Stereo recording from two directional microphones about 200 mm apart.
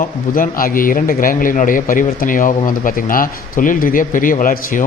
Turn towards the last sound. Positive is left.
turn(degrees=45)  # may be behind; listen again after turning